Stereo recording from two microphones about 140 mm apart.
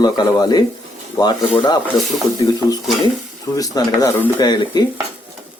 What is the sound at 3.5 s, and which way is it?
Speech, 25° left (ahead or behind).